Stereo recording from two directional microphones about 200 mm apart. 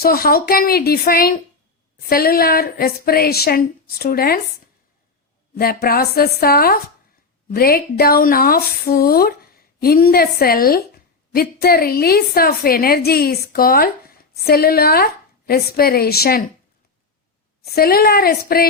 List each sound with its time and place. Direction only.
0.0 s speech: 50° left (ahead or behind)
5.5 s speech: 50° left (ahead or behind)
17.7 s speech: 50° left (ahead or behind)